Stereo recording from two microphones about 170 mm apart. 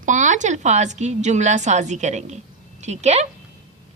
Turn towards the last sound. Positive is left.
turn(degrees=-40)  # may be behind; listen again after turning